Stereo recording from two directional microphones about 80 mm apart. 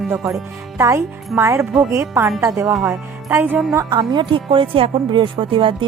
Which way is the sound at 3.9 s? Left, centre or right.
Right.